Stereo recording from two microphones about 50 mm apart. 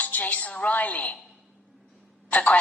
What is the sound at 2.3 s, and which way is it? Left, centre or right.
Speech, left.